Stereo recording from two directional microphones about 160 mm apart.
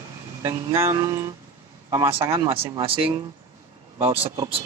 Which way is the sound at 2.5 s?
35° right (ahead or behind).